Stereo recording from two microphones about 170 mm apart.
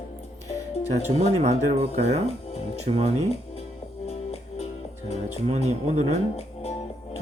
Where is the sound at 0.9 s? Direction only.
40° right (ahead or behind).